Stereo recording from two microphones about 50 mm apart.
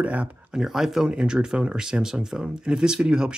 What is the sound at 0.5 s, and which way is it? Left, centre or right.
Speech, centre.